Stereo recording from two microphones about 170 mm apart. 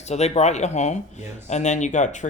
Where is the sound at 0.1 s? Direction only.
40° left (ahead or behind).